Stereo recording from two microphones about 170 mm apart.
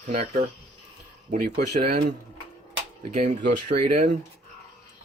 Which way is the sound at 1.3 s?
60° right (ahead or behind).